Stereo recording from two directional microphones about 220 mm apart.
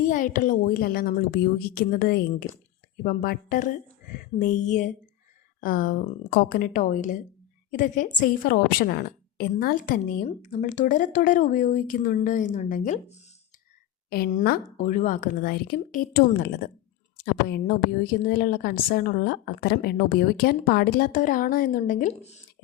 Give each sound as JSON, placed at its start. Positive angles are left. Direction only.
{"t": 0.0, "sound": "a woman's voice", "side_deg": 35}